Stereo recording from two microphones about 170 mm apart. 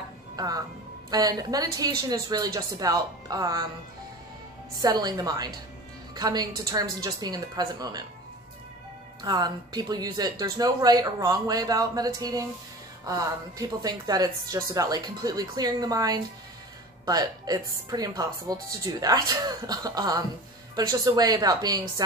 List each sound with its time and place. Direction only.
0.4 s a woman's voice: 20° right (ahead or behind)
4.8 s a woman's voice: 25° right (ahead or behind)
9.2 s a woman's voice: 25° right (ahead or behind)